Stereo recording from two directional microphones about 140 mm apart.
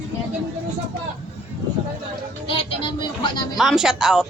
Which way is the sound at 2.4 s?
40° left (ahead or behind).